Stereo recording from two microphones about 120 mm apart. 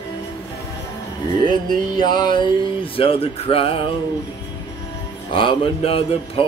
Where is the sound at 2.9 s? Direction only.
50° left (ahead or behind).